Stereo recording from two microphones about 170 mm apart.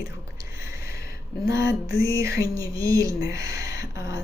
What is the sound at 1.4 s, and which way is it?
A woman's voice, 20° right (ahead or behind).